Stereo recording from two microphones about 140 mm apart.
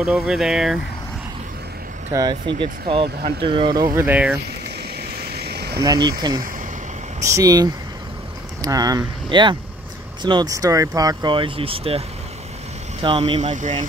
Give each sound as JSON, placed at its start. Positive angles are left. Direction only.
{"t": 0.0, "sound": "speech", "side_deg": -5}
{"t": 2.1, "sound": "speech", "side_deg": -35}
{"t": 3.9, "sound": "speech", "side_deg": -15}
{"t": 5.8, "sound": "speech", "side_deg": -30}
{"t": 13.2, "sound": "speech", "side_deg": -50}